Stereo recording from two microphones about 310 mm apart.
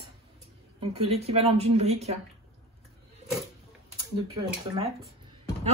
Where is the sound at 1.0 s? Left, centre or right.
Centre.